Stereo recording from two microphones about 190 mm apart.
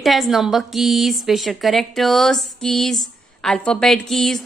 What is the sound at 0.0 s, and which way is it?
A woman's voice, centre (ahead or behind).